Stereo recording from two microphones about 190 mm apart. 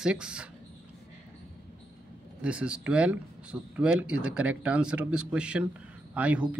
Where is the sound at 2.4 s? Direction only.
5° right (ahead or behind).